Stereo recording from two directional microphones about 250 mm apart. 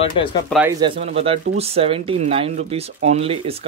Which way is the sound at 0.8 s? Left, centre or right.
Right.